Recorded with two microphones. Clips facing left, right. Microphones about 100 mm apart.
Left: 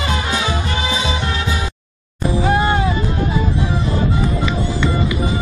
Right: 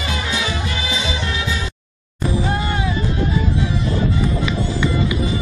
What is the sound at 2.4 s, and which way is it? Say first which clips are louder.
Music: left 6 dB; 55° left (ahead or behind).